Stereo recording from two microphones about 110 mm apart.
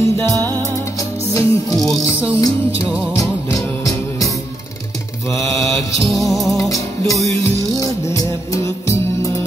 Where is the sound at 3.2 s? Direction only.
30° left (ahead or behind).